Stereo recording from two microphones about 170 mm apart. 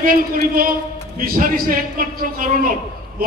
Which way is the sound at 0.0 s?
55° right (ahead or behind).